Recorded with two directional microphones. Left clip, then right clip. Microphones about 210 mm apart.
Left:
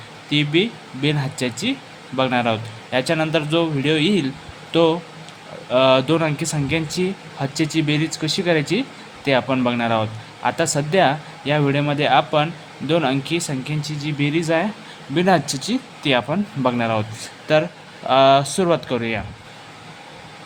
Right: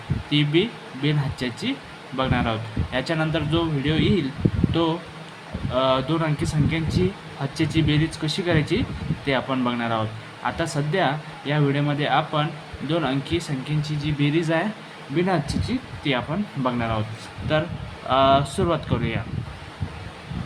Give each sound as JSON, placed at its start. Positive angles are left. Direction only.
{"t": 0.3, "sound": "speech", "side_deg": 20}
{"t": 15.1, "sound": "speech", "side_deg": 35}